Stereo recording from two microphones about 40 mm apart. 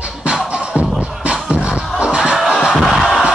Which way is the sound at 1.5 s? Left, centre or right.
Right.